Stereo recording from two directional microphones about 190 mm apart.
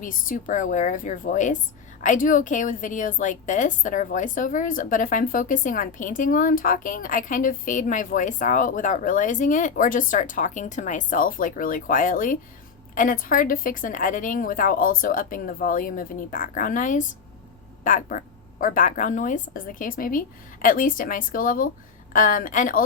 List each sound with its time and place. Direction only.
0.0 s a woman's voice: 45° left (ahead or behind)